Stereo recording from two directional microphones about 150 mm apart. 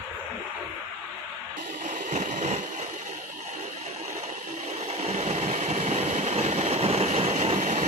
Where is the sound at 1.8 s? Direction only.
55° right (ahead or behind).